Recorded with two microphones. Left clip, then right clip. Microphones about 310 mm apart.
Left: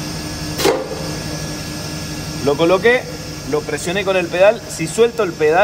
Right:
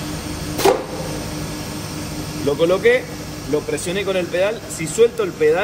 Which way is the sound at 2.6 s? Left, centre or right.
Centre.